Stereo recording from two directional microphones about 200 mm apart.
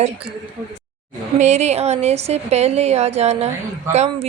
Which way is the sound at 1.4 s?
35° right (ahead or behind).